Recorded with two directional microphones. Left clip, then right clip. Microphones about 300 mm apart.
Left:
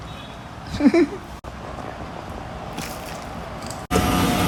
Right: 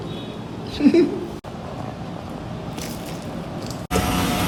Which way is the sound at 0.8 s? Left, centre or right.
Centre.